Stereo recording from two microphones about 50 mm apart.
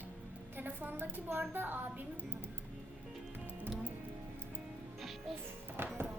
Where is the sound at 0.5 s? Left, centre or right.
Right.